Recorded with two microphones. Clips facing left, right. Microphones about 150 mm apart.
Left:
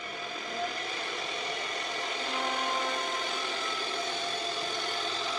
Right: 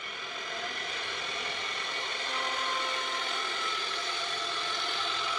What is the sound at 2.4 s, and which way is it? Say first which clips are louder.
Vehicle: left 3 dB; 35° left (ahead or behind).